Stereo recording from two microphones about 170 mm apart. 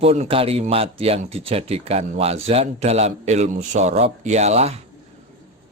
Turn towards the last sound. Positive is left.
turn(degrees=-40)  # may be behind; listen again after turning